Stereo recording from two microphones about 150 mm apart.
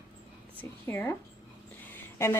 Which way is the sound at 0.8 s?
15° left (ahead or behind).